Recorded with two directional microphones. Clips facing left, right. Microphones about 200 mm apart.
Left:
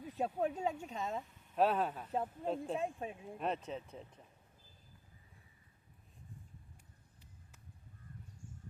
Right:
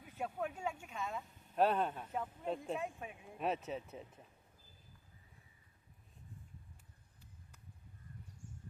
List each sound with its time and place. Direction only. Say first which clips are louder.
0.0 s speech: left 5 dB; 35° left (ahead or behind)
1.5 s speech: left 1 dB; centre (ahead or behind)
2.1 s speech: left 5 dB; 35° left (ahead or behind)
3.3 s speech: right 2 dB; 5° right (ahead or behind)